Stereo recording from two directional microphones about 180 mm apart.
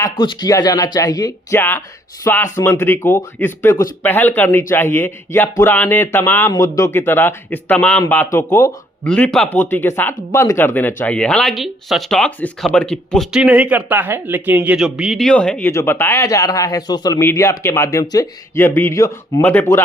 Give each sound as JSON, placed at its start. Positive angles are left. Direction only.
{"t": 0.0, "sound": "speech", "side_deg": 25}